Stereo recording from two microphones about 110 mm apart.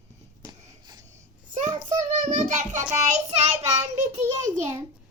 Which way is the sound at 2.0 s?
90° right.